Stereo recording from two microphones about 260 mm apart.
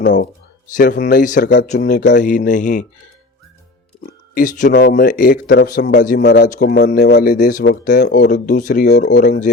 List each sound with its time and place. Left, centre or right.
0.0 s a man's voice: left
0.7 s a man's voice: left
4.4 s a man's voice: left
4.7 s a man's voice: left